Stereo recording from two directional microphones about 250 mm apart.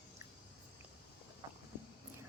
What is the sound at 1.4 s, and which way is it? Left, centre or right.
Vehicle, right.